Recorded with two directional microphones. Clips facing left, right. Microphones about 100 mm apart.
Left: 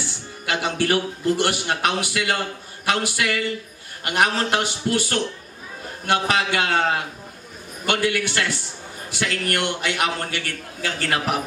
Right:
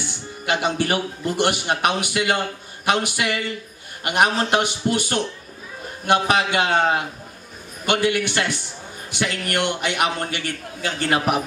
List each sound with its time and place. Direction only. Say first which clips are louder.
0.5 s a man's voice: right 1 dB; 20° right (ahead or behind)